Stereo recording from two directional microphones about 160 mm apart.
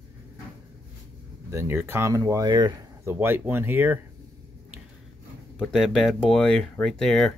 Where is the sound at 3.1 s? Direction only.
15° right (ahead or behind).